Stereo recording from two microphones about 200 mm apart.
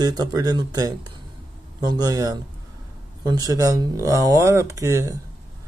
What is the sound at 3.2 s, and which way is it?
Speech, 20° right (ahead or behind).